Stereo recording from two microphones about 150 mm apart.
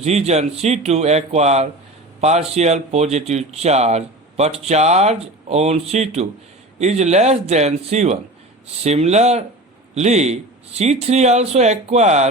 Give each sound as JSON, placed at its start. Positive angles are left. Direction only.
{"t": 0.0, "sound": "speech", "side_deg": -45}